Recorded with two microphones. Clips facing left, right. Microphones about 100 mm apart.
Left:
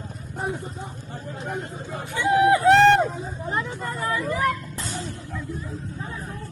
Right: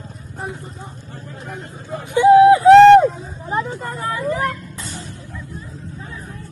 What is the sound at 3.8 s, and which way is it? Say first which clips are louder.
Speech: right 2 dB; 50° right (ahead or behind).